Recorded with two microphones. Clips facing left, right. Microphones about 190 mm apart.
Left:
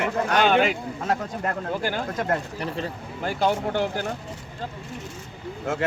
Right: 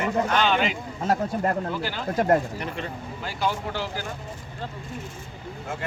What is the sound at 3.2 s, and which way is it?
Speech, 55° left (ahead or behind).